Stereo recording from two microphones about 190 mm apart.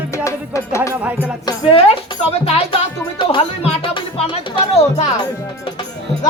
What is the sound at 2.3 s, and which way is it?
Music, 30° left (ahead or behind).